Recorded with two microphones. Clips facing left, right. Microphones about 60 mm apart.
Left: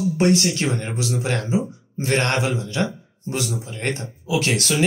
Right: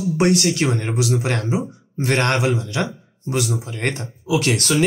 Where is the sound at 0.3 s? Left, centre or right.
Right.